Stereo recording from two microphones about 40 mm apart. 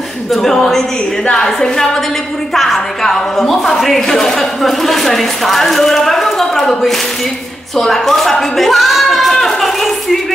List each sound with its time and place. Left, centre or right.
0.4 s a woman's voice: centre
2.5 s a woman's voice: centre
7.7 s speech: centre